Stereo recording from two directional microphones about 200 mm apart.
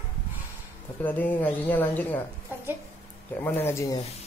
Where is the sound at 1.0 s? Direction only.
10° left (ahead or behind).